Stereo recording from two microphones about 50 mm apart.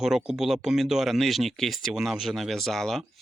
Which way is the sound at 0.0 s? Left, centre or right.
Centre.